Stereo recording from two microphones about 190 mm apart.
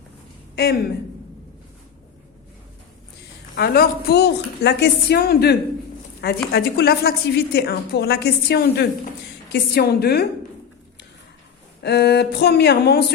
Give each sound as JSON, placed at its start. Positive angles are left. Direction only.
{"t": 0.5, "sound": "speech", "side_deg": 60}
{"t": 3.5, "sound": "a woman's voice", "side_deg": 55}
{"t": 11.8, "sound": "a woman's voice", "side_deg": 60}